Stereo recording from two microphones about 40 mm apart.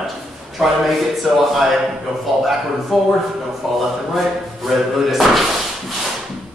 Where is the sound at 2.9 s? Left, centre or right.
Centre.